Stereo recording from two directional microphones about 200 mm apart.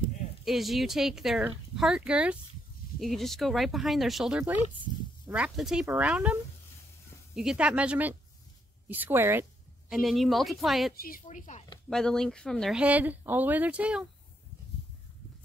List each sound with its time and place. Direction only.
0.5 s speech: centre (ahead or behind)
8.8 s a sound: 10° right (ahead or behind)
9.9 s speech: centre (ahead or behind)
11.0 s speech: 45° left (ahead or behind)
11.9 s speech: 5° left (ahead or behind)